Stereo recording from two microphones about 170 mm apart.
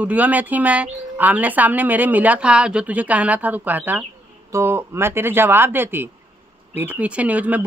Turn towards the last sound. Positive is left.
turn(degrees=-10)  # may be behind; listen again after turning